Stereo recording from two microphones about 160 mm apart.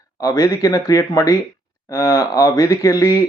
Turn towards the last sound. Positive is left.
turn(degrees=20)  # may be behind; listen again after turning